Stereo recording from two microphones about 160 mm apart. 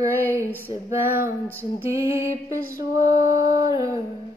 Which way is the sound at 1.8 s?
20° right (ahead or behind).